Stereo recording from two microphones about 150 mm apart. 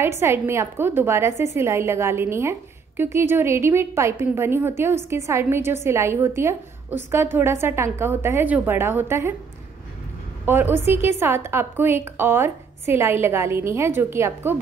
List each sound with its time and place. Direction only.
0.0 s a woman's voice: 15° right (ahead or behind)
10.4 s a woman's voice: 15° right (ahead or behind)